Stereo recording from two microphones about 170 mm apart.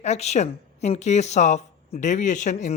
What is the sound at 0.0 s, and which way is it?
A man's voice, 40° left (ahead or behind).